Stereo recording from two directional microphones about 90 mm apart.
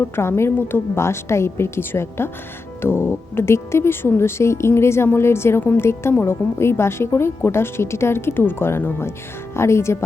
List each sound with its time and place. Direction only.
0.2 s speech: 30° left (ahead or behind)